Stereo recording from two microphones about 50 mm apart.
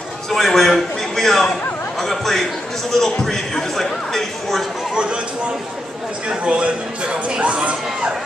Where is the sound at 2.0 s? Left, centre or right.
Centre.